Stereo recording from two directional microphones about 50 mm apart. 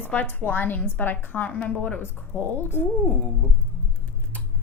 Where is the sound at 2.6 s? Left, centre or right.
Left.